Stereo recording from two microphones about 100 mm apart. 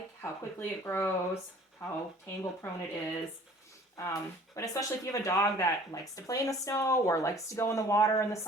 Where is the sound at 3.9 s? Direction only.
30° left (ahead or behind).